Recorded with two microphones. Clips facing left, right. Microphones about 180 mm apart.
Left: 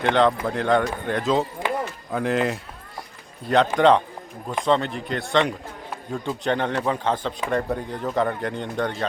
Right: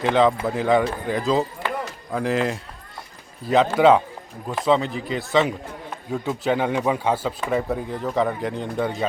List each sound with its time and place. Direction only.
0.0 s a man's voice: 5° right (ahead or behind)